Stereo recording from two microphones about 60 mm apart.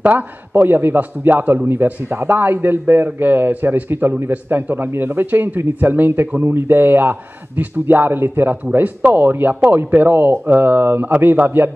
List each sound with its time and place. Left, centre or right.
0.0 s a man's voice: right
2.0 s a man's voice: right